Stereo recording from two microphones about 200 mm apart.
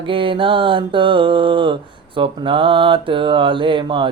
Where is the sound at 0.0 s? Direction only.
25° right (ahead or behind).